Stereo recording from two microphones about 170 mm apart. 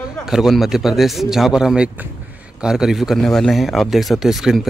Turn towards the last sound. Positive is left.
turn(degrees=0)  # may be behind; listen again after turning